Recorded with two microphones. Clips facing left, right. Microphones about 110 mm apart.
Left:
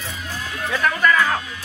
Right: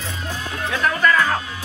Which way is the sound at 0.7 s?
5° left (ahead or behind).